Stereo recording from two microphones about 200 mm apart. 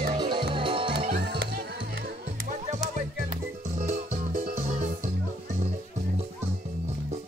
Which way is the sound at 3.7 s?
35° right (ahead or behind).